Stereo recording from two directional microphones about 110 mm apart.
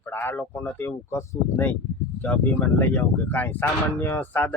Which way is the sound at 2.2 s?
15° left (ahead or behind).